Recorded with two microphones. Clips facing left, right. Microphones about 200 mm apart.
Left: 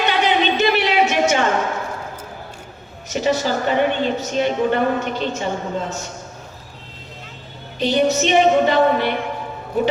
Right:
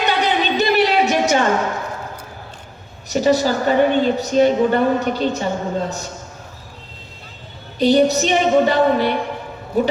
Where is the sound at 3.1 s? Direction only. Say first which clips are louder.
Right 4 dB; 35° right (ahead or behind).